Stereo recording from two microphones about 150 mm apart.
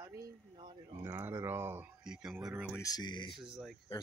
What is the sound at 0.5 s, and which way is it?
Speech, 35° right (ahead or behind).